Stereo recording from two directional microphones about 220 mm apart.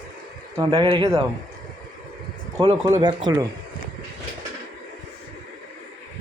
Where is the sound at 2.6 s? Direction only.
20° right (ahead or behind).